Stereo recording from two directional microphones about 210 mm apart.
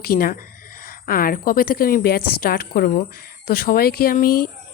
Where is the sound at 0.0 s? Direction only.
45° left (ahead or behind).